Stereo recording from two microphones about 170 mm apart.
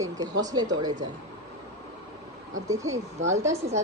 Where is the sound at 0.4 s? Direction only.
25° right (ahead or behind).